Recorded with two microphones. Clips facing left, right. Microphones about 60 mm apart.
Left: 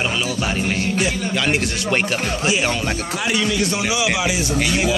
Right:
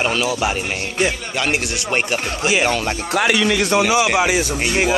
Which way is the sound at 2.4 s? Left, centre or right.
Right.